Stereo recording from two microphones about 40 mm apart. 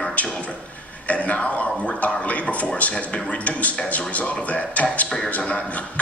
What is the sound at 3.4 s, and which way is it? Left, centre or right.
A man's voice, left.